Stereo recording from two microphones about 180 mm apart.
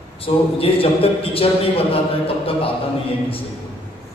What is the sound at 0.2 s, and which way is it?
A man's voice, 30° left (ahead or behind).